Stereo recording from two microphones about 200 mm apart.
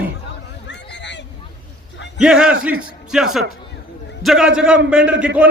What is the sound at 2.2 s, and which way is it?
A man's voice, 5° right (ahead or behind).